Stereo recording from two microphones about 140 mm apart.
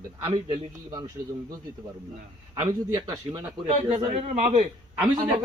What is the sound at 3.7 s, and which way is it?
Speech, 45° right (ahead or behind).